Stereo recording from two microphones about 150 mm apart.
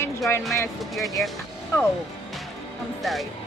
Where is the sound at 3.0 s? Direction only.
Centre (ahead or behind).